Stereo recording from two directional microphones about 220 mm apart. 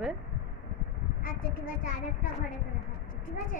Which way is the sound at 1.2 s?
40° left (ahead or behind).